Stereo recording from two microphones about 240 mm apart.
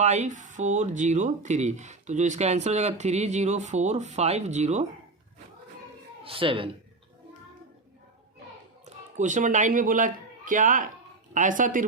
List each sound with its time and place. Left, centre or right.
0.0 s speech: right
6.2 s speech: right
8.8 s speech: right